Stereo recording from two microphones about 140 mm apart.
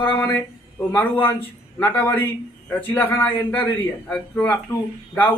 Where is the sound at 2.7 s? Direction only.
15° left (ahead or behind).